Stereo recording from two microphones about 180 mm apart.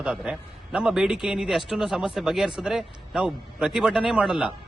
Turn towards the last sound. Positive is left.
turn(degrees=-5)  # may be behind; listen again after turning